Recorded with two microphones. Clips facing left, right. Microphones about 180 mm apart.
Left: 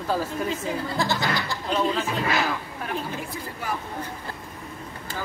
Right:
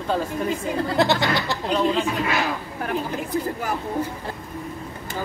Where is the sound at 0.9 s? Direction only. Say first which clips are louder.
Right 7 dB; 70° right (ahead or behind).